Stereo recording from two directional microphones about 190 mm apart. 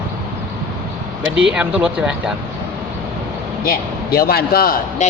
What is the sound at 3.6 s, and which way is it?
A man's voice, 50° left (ahead or behind).